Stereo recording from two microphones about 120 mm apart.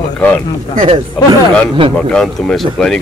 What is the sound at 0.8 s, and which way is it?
Speech, 45° right (ahead or behind).